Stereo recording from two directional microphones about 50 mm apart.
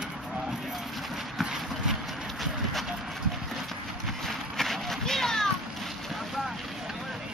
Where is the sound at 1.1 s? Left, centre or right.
Centre.